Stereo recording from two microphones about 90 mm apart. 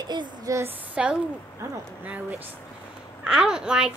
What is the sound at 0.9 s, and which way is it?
A woman's voice, 10° right (ahead or behind).